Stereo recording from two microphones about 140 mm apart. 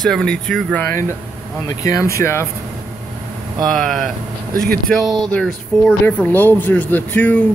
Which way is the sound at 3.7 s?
Centre (ahead or behind).